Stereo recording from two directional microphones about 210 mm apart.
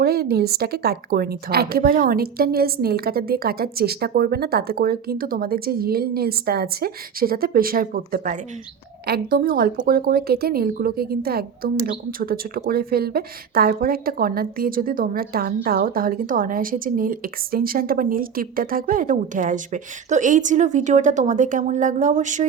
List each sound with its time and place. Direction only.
0.0 s a woman's voice: 45° right (ahead or behind)